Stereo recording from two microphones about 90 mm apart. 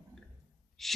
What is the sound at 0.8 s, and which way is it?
Speech, centre (ahead or behind).